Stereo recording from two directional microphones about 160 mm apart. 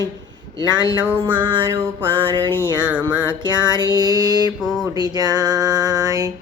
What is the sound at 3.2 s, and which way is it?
Music, 30° right (ahead or behind).